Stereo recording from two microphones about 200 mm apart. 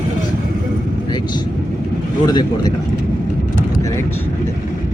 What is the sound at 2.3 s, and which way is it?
Speech, 20° left (ahead or behind).